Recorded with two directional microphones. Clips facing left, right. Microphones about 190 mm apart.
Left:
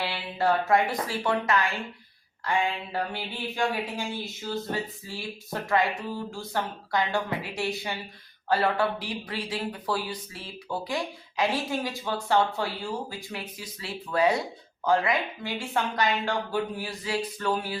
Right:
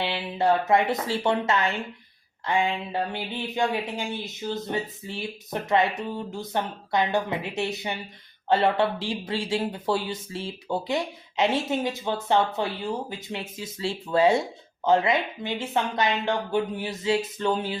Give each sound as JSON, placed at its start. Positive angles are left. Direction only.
{"t": 0.0, "sound": "speech", "side_deg": -20}